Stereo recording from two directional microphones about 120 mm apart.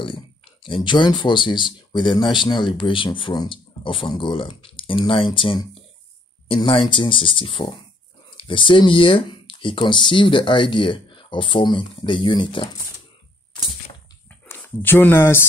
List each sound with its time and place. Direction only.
0.7 s speech: 40° left (ahead or behind)
14.5 s speech: 15° left (ahead or behind)